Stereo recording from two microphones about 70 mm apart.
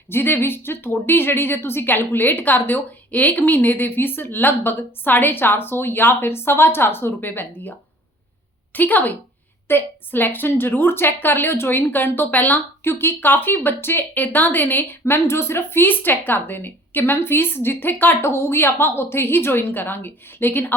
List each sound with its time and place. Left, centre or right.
0.1 s a woman's voice: left
8.7 s a woman's voice: left